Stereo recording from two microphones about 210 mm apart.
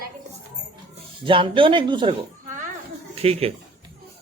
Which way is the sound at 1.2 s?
25° right (ahead or behind).